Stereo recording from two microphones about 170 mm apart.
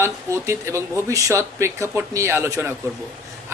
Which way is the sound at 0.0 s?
15° right (ahead or behind).